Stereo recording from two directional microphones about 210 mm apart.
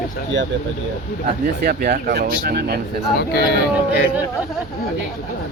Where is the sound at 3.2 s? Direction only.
50° left (ahead or behind).